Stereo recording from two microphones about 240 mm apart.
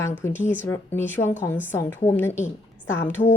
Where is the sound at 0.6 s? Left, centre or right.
Centre.